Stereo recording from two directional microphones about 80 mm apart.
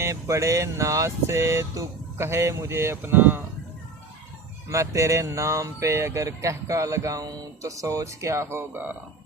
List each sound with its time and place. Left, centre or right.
0.0 s speech: right
4.7 s speech: right